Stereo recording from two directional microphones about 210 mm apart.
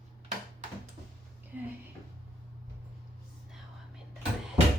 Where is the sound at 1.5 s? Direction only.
10° right (ahead or behind).